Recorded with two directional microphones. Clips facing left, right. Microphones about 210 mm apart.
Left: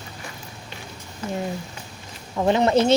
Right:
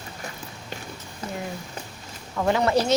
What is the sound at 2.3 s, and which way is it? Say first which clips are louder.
Speech: left 3 dB; 20° left (ahead or behind).